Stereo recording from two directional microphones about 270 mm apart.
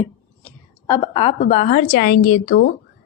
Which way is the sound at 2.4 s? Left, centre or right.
Left.